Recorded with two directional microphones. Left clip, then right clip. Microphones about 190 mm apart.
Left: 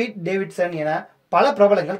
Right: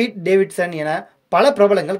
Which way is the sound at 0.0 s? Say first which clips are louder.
Right 7 dB; 35° right (ahead or behind).